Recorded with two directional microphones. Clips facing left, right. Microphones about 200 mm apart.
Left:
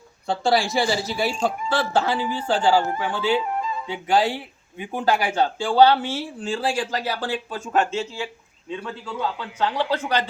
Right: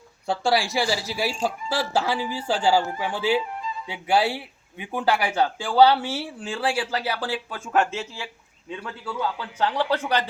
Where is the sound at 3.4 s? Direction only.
55° left (ahead or behind).